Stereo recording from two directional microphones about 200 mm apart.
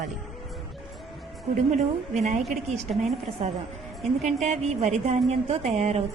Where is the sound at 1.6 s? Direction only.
35° right (ahead or behind).